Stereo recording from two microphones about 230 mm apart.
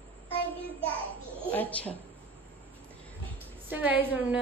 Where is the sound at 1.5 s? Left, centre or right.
Centre.